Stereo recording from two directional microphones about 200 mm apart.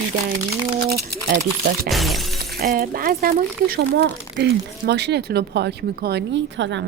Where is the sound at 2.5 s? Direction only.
50° right (ahead or behind).